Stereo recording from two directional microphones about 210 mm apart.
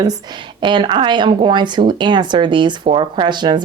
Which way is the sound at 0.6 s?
20° right (ahead or behind).